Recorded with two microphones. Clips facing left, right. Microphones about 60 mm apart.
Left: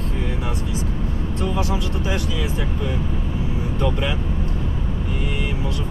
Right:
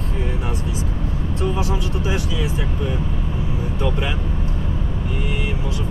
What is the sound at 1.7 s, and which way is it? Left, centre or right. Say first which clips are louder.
Speech: right 1 dB; centre.